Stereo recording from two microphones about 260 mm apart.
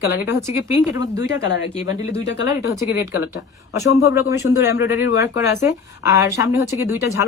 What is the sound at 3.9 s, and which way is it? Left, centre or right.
Speech, left.